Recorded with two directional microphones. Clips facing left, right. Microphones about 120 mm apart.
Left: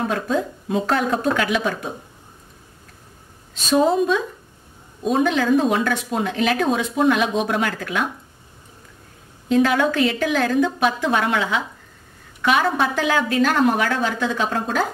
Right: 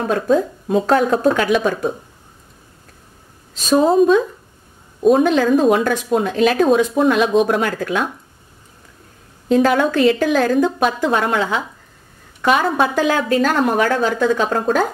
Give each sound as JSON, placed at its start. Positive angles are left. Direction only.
{"t": 0.3, "sound": "a woman's voice", "side_deg": -40}
{"t": 3.6, "sound": "a woman's voice", "side_deg": -40}
{"t": 9.5, "sound": "a woman's voice", "side_deg": -40}